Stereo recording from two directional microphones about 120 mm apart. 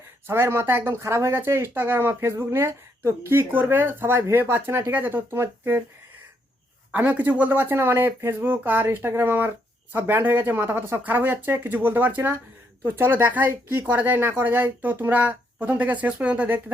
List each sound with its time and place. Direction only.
0.3 s speech: 20° right (ahead or behind)
6.9 s speech: 15° right (ahead or behind)